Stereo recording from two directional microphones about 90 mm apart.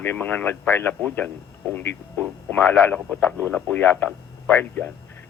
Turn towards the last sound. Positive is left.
turn(degrees=20)  # may be behind; listen again after turning